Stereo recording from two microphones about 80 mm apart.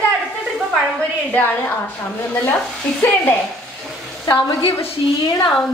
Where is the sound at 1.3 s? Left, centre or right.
Left.